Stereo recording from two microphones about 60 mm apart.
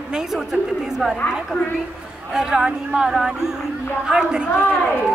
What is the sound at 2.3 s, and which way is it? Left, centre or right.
Speech, centre.